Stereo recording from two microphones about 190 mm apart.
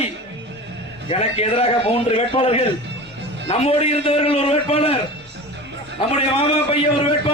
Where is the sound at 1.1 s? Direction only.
35° left (ahead or behind).